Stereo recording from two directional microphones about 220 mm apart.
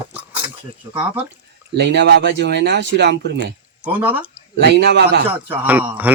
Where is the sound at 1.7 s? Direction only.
50° right (ahead or behind).